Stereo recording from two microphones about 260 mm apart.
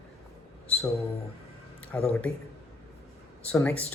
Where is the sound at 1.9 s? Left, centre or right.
Centre.